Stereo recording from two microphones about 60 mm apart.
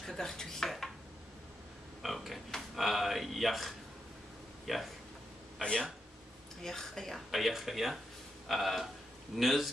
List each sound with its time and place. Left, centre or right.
0.0 s dishes: centre
2.0 s a man's voice: centre
5.6 s speech: centre